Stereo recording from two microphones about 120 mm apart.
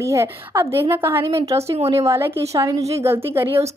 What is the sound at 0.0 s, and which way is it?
A woman's voice, 25° right (ahead or behind).